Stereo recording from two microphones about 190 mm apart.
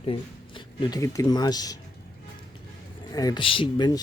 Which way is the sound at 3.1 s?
20° left (ahead or behind).